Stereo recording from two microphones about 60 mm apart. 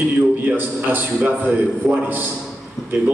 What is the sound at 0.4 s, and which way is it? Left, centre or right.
A man's voice, right.